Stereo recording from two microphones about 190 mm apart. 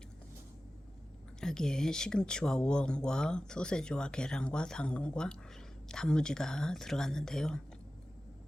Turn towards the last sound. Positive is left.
turn(degrees=5)  # may be behind; listen again after turning